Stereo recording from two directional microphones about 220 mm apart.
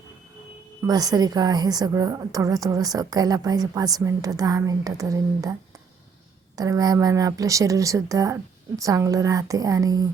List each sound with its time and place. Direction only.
0.8 s a woman's voice: 15° right (ahead or behind)
6.6 s a woman's voice: 15° right (ahead or behind)